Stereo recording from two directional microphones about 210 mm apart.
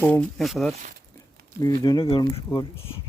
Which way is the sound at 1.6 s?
15° left (ahead or behind).